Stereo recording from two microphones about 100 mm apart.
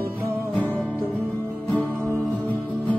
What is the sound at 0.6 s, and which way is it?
Music, 20° left (ahead or behind).